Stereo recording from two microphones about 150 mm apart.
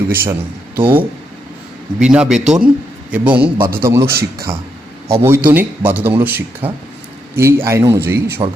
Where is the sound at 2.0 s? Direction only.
5° right (ahead or behind).